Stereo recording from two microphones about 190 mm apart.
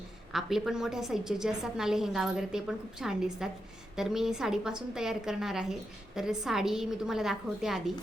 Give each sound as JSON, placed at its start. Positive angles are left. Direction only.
{"t": 0.3, "sound": "a woman's voice", "side_deg": 0}